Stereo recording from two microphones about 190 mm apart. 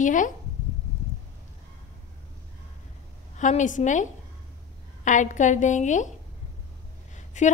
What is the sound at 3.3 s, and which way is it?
A woman's voice, 40° left (ahead or behind).